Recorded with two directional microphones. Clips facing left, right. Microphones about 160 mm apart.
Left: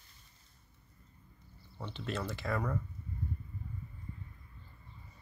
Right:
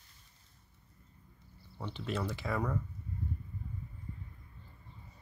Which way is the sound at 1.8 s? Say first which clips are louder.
Right 2 dB; 10° right (ahead or behind).